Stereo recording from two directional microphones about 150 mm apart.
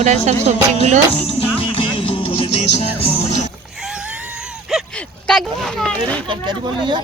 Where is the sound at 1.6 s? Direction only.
35° left (ahead or behind).